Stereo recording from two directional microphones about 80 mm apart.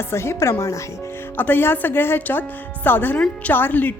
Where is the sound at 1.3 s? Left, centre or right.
Left.